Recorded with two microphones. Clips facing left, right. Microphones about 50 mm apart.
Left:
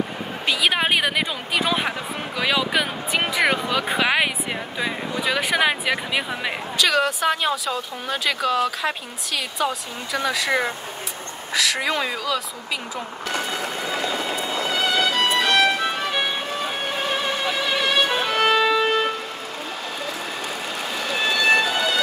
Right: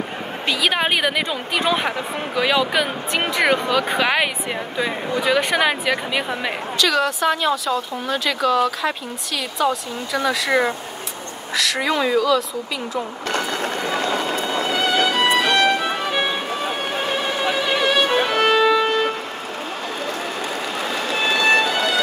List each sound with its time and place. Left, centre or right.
0.5 s a woman's voice: centre
13.3 s train: right
14.7 s music: centre
17.6 s violin: centre